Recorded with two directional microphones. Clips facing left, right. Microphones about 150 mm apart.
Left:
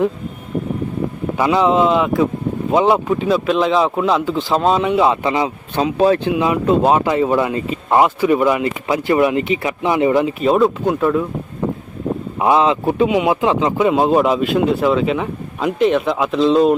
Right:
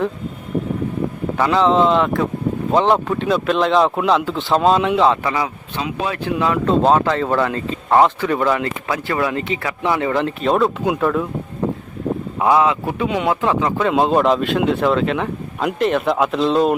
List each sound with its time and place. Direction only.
1.4 s speech: 10° left (ahead or behind)
5.7 s speech: 35° left (ahead or behind)
6.3 s speech: 15° left (ahead or behind)
10.2 s speech: 5° left (ahead or behind)
12.4 s speech: 20° left (ahead or behind)
13.1 s speech: 15° left (ahead or behind)